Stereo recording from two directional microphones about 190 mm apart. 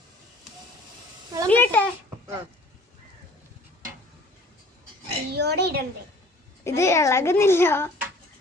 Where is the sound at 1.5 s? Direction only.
10° left (ahead or behind).